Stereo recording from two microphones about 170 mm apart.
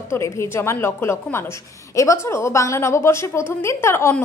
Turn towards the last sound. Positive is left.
turn(degrees=15)  # may be behind; listen again after turning